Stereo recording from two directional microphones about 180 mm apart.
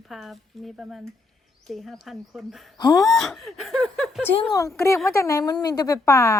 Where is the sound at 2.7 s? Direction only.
20° left (ahead or behind).